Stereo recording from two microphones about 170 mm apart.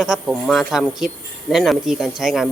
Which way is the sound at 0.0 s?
Centre (ahead or behind).